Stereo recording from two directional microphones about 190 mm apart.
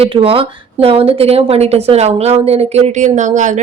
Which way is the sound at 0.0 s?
30° right (ahead or behind).